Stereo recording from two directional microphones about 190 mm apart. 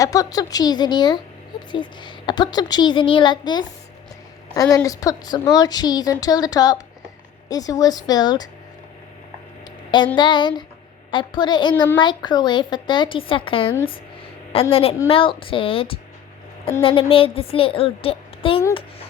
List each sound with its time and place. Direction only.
0.0 s a woman's voice: 20° left (ahead or behind)
10.2 s a woman's voice: 25° left (ahead or behind)